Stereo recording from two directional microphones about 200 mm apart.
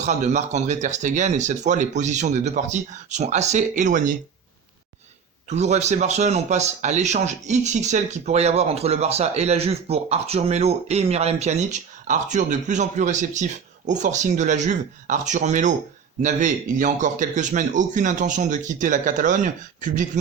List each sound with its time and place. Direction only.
0.0 s speech: 35° right (ahead or behind)
5.5 s speech: 35° right (ahead or behind)